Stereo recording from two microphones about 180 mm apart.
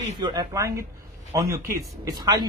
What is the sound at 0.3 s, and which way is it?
A man's voice, 20° right (ahead or behind).